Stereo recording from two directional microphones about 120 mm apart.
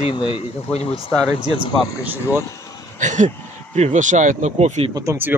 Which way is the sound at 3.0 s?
90° right.